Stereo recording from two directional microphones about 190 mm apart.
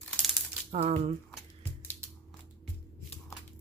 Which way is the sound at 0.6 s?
35° right (ahead or behind).